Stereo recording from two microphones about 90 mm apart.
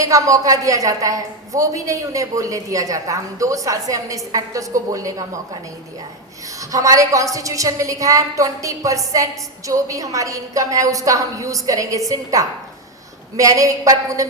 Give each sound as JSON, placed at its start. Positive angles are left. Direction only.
{"t": 0.0, "sound": "a woman's voice", "side_deg": -40}
{"t": 6.6, "sound": "a woman's voice", "side_deg": -40}